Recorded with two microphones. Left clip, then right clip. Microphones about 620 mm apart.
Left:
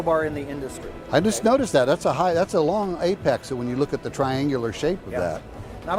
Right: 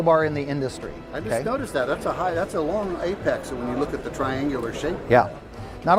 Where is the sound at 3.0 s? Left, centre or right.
Left.